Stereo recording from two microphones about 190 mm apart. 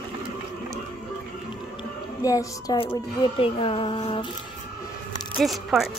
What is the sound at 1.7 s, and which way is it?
A woman's voice, 20° left (ahead or behind).